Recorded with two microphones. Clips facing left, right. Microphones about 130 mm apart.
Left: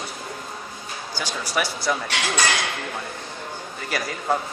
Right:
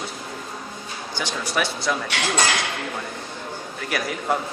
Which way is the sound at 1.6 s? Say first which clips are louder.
Even; 5° left (ahead or behind).